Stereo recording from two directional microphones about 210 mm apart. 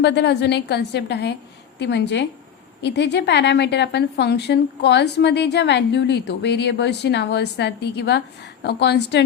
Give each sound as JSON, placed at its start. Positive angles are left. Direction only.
{"t": 0.0, "sound": "a woman's voice", "side_deg": 55}